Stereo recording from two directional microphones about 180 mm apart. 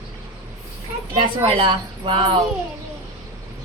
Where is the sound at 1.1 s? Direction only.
30° right (ahead or behind).